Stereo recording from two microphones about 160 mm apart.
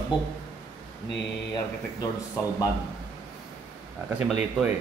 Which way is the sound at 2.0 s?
25° left (ahead or behind).